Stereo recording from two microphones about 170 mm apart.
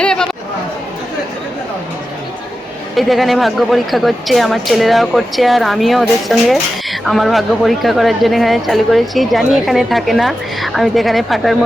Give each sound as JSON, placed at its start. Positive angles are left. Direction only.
{"t": 0.0, "sound": "chatter", "side_deg": 5}
{"t": 2.9, "sound": "a woman's voice", "side_deg": 0}